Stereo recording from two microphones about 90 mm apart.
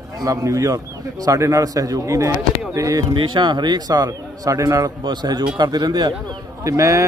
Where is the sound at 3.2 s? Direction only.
55° right (ahead or behind); by 4.9 s 40° right (ahead or behind).